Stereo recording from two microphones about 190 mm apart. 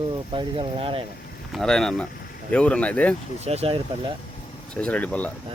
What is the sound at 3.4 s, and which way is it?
Speech, 35° right (ahead or behind).